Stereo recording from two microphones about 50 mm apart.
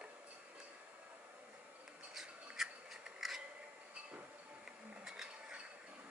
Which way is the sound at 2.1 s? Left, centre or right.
Centre.